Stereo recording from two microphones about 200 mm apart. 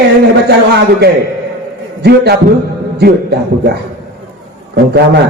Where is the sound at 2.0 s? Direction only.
55° right (ahead or behind).